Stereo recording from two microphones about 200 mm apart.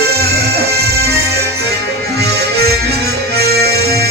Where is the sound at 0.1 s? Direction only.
50° right (ahead or behind).